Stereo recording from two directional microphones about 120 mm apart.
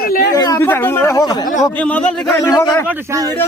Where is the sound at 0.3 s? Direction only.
30° left (ahead or behind).